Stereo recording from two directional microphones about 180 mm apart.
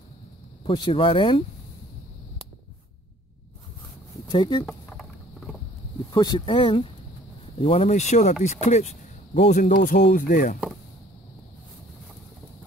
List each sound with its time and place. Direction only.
0.7 s speech: 30° left (ahead or behind)
4.3 s speech: 25° left (ahead or behind)
4.6 s a sound: 5° left (ahead or behind)
6.1 s speech: 30° left (ahead or behind); by 9.8 s 45° left (ahead or behind)
9.8 s speech: 65° left (ahead or behind)
10.1 s speech: 50° left (ahead or behind)